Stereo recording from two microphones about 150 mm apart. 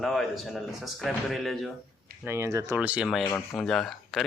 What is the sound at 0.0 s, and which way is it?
Speech, centre (ahead or behind).